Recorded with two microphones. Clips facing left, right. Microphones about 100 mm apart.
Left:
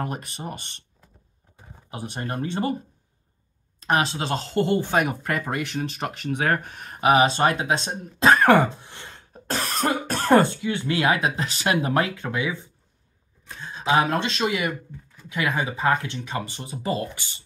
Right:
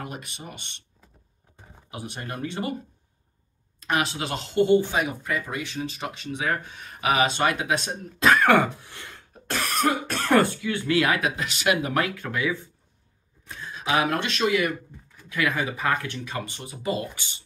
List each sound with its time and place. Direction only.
0.0 s speech: 40° left (ahead or behind)
1.9 s speech: 35° left (ahead or behind)
3.8 s speech: 35° left (ahead or behind); by 7.0 s 50° left (ahead or behind)
7.0 s speech: 30° left (ahead or behind)
8.8 s speech: 25° left (ahead or behind)